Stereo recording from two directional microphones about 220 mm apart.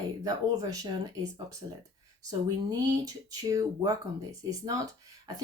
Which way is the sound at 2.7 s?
15° right (ahead or behind).